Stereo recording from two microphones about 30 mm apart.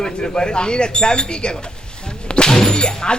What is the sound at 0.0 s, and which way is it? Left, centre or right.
Speech, left.